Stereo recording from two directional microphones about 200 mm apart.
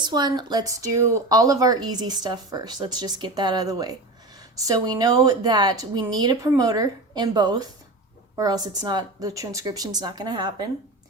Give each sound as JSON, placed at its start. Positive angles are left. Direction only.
{"t": 0.0, "sound": "speech", "side_deg": -20}